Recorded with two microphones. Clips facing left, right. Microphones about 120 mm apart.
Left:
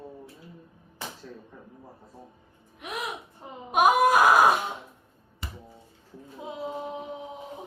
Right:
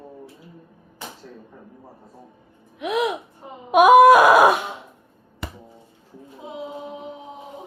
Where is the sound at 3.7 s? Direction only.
90° right.